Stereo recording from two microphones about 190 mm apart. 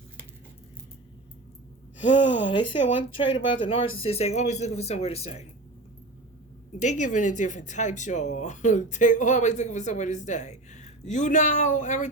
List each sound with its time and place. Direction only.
2.0 s speech: 75° left (ahead or behind)
2.5 s speech: 25° left (ahead or behind)
6.8 s speech: 40° left (ahead or behind)